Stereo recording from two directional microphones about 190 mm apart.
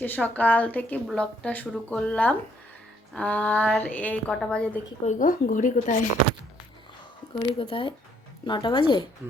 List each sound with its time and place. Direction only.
0.0 s a woman's voice: 10° left (ahead or behind)
5.0 s speech: 45° left (ahead or behind)
7.6 s speech: 25° left (ahead or behind)